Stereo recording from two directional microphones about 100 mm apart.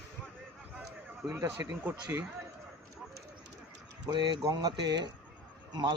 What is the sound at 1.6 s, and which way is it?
Speech, 30° right (ahead or behind).